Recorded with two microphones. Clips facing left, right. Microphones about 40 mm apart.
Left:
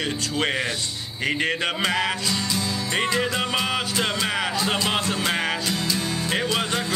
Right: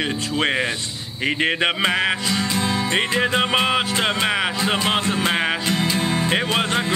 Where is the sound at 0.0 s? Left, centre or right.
Right.